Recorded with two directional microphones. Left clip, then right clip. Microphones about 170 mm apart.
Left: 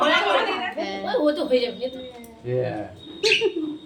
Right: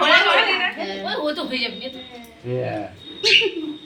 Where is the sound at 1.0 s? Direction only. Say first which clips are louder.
Left 4 dB; 90° left.